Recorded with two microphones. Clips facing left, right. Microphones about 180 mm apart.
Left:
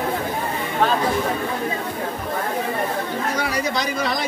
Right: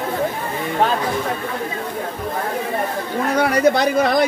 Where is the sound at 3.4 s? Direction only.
60° right (ahead or behind).